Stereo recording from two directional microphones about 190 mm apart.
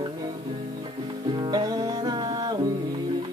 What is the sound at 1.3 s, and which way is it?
Music, 20° right (ahead or behind).